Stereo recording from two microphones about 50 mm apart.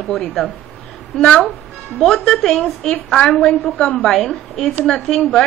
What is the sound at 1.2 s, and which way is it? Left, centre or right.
Speech, left.